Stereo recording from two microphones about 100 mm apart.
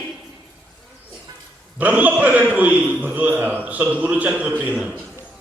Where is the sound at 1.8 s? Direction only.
15° right (ahead or behind).